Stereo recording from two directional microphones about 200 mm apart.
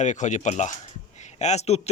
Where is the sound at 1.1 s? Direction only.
35° left (ahead or behind).